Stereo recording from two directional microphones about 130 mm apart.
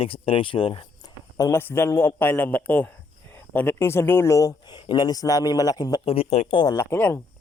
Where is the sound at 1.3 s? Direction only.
20° left (ahead or behind).